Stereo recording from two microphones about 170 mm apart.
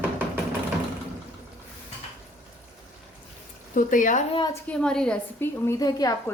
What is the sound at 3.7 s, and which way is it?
Speech, 50° left (ahead or behind).